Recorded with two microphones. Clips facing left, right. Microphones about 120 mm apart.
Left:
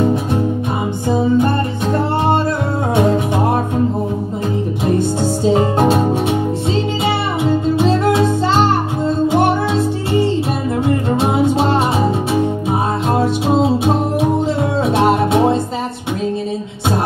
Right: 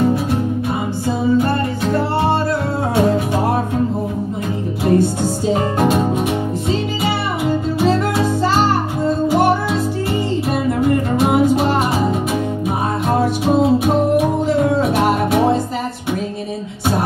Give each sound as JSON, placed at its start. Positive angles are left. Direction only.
{"t": 10.8, "sound": "music", "side_deg": 25}
{"t": 13.2, "sound": "music", "side_deg": 25}